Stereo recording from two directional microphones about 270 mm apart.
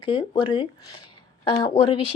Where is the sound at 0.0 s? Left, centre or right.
Centre.